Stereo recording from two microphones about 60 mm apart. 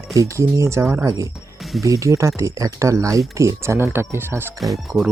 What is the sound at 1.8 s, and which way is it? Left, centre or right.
Speech, right.